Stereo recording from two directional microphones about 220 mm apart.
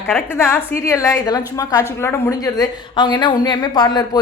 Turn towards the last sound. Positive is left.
turn(degrees=20)  # may be behind; listen again after turning